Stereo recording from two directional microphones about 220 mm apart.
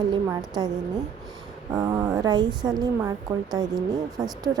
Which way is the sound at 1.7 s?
15° right (ahead or behind).